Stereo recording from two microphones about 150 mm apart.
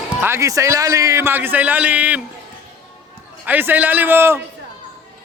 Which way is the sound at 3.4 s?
10° right (ahead or behind).